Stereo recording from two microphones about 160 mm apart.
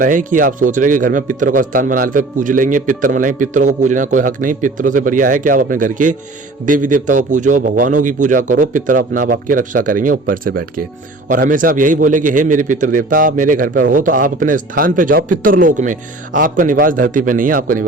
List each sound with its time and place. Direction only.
0.0 s a man's voice: 55° right (ahead or behind)